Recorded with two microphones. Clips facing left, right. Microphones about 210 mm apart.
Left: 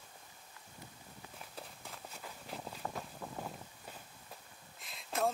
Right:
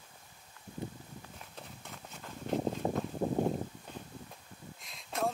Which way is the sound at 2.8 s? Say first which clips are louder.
Right 7 dB; 30° right (ahead or behind).